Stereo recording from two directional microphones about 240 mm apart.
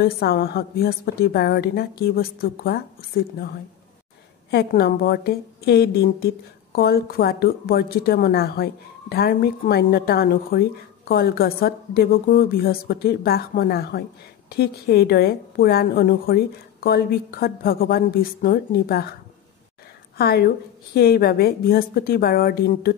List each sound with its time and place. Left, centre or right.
0.0 s a woman's voice: left
4.5 s a woman's voice: left
20.2 s a woman's voice: left